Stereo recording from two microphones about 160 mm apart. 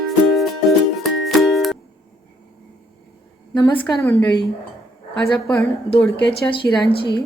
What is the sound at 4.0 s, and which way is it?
Speech, 15° left (ahead or behind).